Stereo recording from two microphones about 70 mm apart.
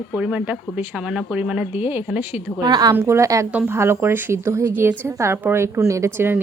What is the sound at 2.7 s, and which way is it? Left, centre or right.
Speech, right.